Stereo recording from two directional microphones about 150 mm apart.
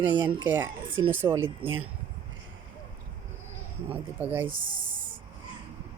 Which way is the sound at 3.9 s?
10° right (ahead or behind).